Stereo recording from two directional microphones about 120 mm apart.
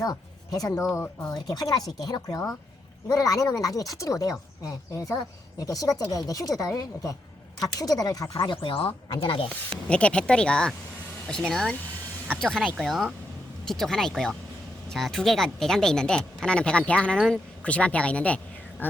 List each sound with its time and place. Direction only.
0.0 s speech: 30° left (ahead or behind)
1.3 s speech: 30° left (ahead or behind)
8.4 s speech: 45° left (ahead or behind)
9.9 s speech: 10° left (ahead or behind)